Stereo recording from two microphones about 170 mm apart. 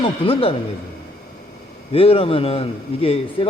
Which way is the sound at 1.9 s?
35° left (ahead or behind).